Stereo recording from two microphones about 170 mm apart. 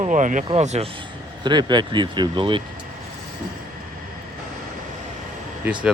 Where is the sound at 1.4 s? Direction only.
25° right (ahead or behind).